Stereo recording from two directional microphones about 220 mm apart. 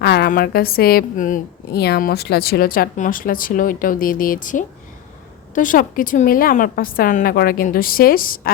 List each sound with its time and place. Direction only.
0.0 s a woman's voice: 45° left (ahead or behind)